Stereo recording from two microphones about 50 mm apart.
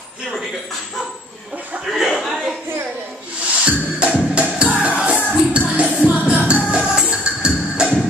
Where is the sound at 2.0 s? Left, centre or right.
Centre.